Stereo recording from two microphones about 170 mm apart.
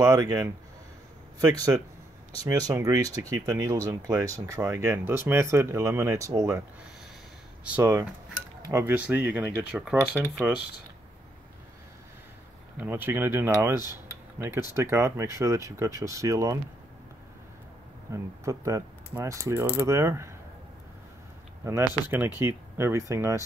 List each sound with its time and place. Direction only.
0.0 s speech: 20° right (ahead or behind)
2.3 s speech: 20° right (ahead or behind)
7.6 s speech: 10° right (ahead or behind)
12.7 s speech: 10° right (ahead or behind)
18.1 s speech: 15° right (ahead or behind)
22.1 s speech: 10° right (ahead or behind)